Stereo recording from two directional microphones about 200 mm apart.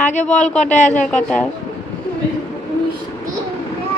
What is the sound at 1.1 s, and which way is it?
Speech, 5° left (ahead or behind).